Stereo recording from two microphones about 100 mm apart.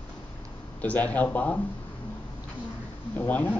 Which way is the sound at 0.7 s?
15° left (ahead or behind).